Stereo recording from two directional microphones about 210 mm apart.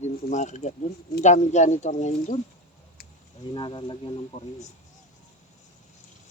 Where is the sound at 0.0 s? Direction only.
35° left (ahead or behind).